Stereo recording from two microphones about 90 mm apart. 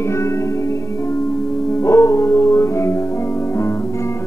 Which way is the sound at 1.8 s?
30° left (ahead or behind).